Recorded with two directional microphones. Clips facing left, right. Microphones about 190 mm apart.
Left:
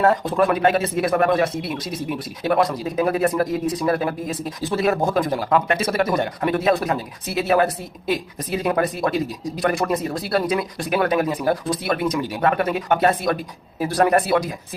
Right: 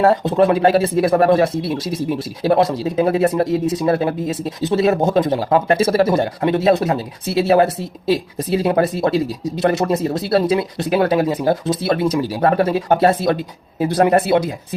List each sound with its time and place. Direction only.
0.0 s speech: 25° right (ahead or behind)